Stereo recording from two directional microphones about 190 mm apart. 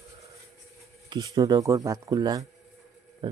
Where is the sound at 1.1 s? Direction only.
20° right (ahead or behind).